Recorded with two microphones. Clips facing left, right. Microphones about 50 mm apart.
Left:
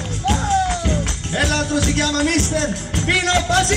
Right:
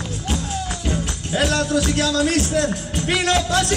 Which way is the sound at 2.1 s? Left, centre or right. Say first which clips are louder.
Even; left.